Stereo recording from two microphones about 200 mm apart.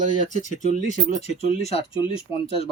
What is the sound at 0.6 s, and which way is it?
Speech, 40° right (ahead or behind).